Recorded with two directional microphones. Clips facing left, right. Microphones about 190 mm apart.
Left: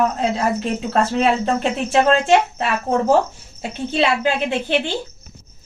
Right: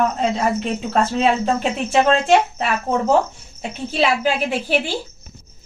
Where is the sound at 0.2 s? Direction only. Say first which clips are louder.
Even; centre (ahead or behind).